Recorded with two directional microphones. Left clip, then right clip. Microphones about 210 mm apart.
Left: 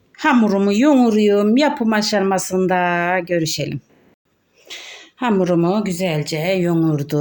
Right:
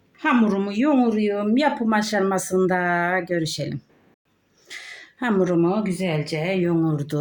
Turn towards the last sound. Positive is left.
turn(degrees=30)  # may be behind; listen again after turning